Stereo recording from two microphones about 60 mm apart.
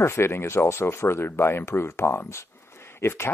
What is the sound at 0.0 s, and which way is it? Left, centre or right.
Speech, left.